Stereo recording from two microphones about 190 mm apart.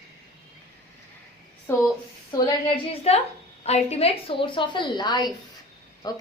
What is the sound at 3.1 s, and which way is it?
A woman's voice, 35° left (ahead or behind).